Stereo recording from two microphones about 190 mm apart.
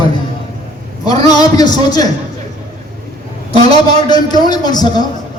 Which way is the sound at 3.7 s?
20° left (ahead or behind).